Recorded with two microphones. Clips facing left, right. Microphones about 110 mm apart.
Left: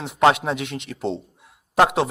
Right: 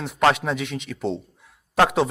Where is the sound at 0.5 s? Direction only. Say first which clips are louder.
Right 1 dB; 60° left (ahead or behind).